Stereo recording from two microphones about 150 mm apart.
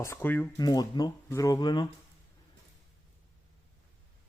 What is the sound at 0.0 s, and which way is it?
Speech, 15° left (ahead or behind).